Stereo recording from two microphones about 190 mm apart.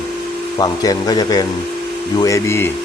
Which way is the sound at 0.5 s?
20° left (ahead or behind).